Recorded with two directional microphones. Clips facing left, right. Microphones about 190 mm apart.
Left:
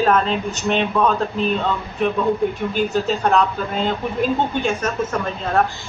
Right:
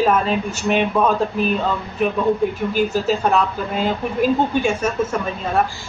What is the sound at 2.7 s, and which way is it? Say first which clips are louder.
A woman's voice: right 1 dB; 5° right (ahead or behind).